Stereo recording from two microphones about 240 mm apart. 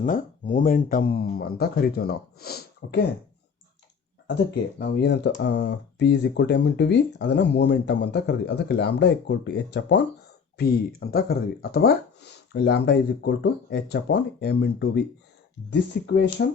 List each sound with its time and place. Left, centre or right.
0.0 s speech: left
4.3 s speech: left